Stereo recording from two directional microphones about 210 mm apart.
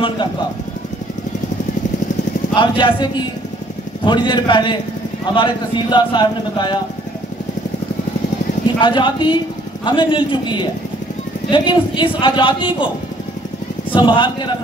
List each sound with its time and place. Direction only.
2.5 s a man's voice: 20° left (ahead or behind)
8.7 s a man's voice: 20° left (ahead or behind)
13.9 s a man's voice: 20° left (ahead or behind)